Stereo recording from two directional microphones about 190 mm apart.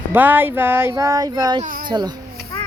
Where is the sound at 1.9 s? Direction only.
20° right (ahead or behind).